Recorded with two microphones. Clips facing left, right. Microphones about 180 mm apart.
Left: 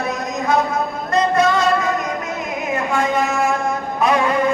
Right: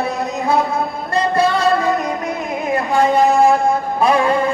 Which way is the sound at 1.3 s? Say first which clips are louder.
Right 4 dB; 30° right (ahead or behind).